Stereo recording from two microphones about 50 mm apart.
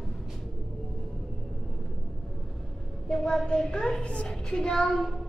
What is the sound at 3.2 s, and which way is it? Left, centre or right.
A child's voice, centre.